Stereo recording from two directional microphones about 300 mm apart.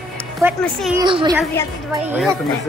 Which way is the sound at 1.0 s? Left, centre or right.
Centre.